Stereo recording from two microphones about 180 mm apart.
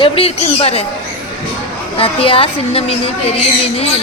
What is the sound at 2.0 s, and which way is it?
A woman's voice, 30° left (ahead or behind).